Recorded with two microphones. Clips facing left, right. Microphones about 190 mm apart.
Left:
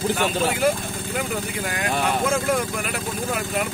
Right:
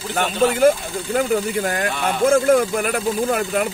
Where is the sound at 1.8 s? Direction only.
50° right (ahead or behind).